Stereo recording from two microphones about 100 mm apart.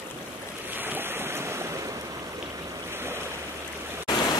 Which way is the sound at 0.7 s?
20° right (ahead or behind).